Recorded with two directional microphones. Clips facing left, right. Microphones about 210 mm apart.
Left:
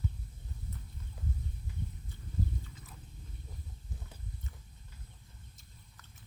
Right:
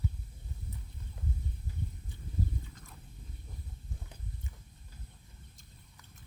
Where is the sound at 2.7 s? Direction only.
5° left (ahead or behind).